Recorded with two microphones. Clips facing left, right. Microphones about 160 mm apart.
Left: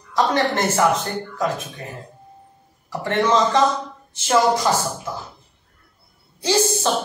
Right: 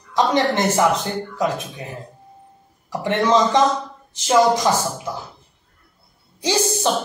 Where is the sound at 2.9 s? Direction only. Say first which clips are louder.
Right 1 dB; 15° right (ahead or behind).